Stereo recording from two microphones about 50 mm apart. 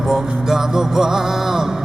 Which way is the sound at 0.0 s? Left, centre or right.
Centre.